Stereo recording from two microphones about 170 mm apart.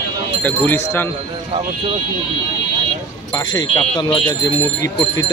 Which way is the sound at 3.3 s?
25° left (ahead or behind).